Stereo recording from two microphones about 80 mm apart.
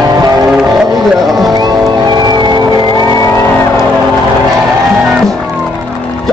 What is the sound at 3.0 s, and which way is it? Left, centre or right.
Music, left.